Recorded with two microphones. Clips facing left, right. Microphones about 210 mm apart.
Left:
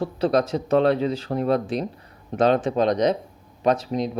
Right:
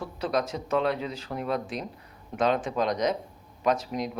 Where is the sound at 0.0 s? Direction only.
30° left (ahead or behind).